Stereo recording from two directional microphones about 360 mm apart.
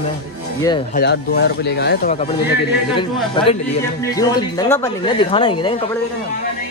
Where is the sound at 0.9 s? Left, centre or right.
Left.